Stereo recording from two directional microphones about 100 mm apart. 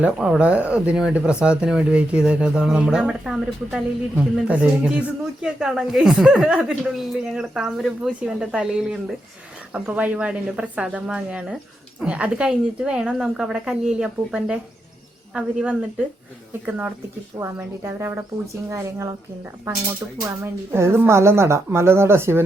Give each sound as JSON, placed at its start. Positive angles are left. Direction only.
{"t": 0.0, "sound": "a woman's voice", "side_deg": -10}
{"t": 20.2, "sound": "a woman's voice", "side_deg": -25}